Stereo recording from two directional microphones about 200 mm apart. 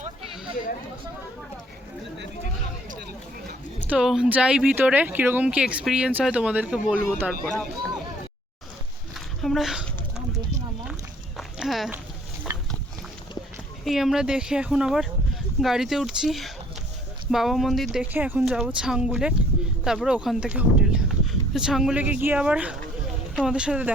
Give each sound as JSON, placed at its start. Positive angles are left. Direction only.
{"t": 3.8, "sound": "speech", "side_deg": -5}
{"t": 9.1, "sound": "a sound", "side_deg": 0}
{"t": 10.2, "sound": "clip-clop", "side_deg": -35}
{"t": 11.3, "sound": "walk", "side_deg": 0}
{"t": 12.5, "sound": "a sound", "side_deg": -15}
{"t": 13.8, "sound": "speech", "side_deg": 0}